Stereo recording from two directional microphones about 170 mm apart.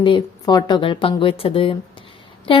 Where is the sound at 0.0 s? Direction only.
25° left (ahead or behind).